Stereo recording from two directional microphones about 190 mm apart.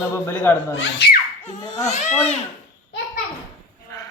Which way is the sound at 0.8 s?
60° left (ahead or behind).